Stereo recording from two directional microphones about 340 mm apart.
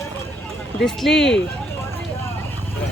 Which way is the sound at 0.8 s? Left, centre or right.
Centre.